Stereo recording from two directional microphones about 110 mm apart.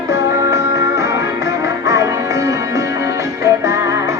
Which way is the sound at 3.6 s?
25° right (ahead or behind).